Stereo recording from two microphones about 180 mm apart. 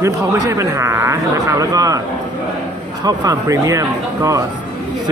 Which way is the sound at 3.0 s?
20° right (ahead or behind).